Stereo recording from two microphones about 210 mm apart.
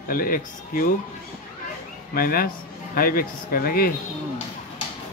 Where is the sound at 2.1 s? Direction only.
45° left (ahead or behind).